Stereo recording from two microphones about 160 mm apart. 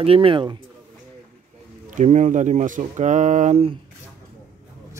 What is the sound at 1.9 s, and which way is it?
Speech, 50° right (ahead or behind).